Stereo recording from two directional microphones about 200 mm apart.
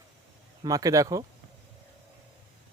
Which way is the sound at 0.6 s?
15° right (ahead or behind).